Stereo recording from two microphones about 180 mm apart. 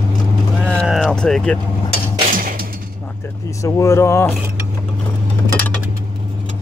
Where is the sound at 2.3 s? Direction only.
50° right (ahead or behind).